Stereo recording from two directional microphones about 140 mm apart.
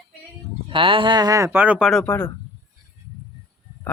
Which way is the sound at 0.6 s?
40° right (ahead or behind).